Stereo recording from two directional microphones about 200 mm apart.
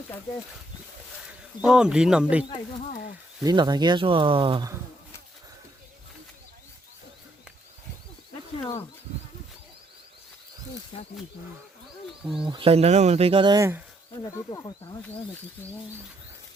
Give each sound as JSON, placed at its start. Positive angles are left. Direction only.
{"t": 1.6, "sound": "speech", "side_deg": -5}
{"t": 3.4, "sound": "speech", "side_deg": -20}
{"t": 10.9, "sound": "speech", "side_deg": 25}
{"t": 12.2, "sound": "speech", "side_deg": -5}
{"t": 12.5, "sound": "speech", "side_deg": -25}
{"t": 14.3, "sound": "speech", "side_deg": 15}